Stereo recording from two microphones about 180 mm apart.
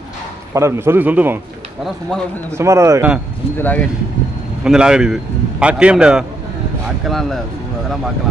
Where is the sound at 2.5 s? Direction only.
15° right (ahead or behind).